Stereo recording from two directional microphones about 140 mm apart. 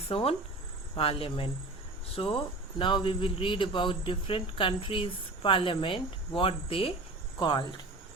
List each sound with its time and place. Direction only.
0.1 s a man's voice: 40° left (ahead or behind)